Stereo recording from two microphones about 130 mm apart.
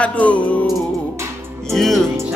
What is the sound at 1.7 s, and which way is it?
Music, centre (ahead or behind).